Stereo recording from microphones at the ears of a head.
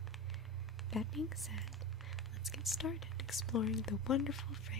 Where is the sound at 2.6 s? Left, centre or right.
Left.